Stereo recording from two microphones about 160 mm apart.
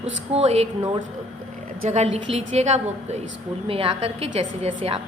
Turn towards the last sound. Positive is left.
turn(degrees=-40)  # may be behind; listen again after turning